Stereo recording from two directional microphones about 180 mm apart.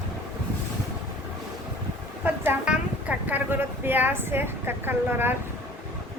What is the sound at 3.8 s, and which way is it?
A woman's voice, 10° right (ahead or behind).